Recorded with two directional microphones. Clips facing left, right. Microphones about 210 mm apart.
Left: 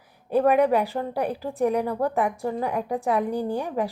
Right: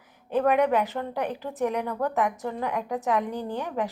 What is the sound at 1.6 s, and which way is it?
Speech, 35° left (ahead or behind).